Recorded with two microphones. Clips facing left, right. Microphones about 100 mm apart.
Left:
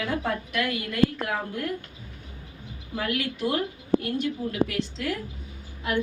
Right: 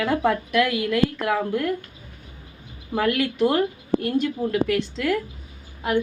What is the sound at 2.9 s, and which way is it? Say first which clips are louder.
A woman's voice: right 7 dB; 60° right (ahead or behind).